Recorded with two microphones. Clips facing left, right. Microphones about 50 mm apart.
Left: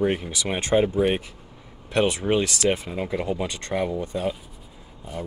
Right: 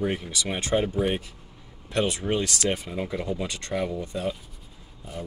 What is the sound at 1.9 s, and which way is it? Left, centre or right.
Speech, left.